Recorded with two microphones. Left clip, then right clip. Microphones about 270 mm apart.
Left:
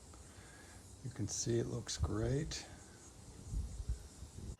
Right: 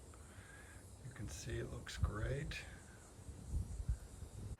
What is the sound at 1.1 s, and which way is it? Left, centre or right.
Speech, centre.